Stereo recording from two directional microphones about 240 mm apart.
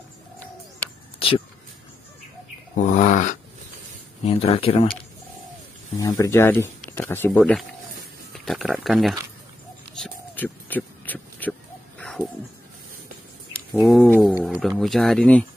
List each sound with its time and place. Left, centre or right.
1.2 s a sound: left
2.7 s speech: left
5.9 s speech: centre
9.9 s a sound: centre
13.7 s wild animals: centre
14.8 s speech: centre